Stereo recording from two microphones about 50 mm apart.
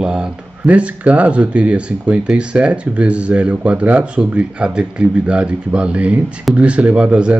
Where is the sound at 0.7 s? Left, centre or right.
Right.